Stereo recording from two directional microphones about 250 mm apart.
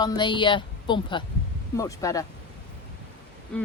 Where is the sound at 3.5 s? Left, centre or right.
Centre.